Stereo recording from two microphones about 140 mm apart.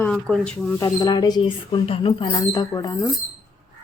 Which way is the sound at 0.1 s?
5° left (ahead or behind).